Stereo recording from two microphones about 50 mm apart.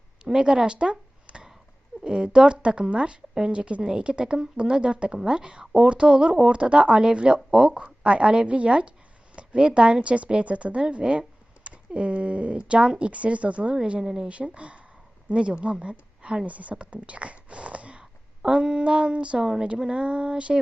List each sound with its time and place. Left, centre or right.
0.3 s a woman's voice: centre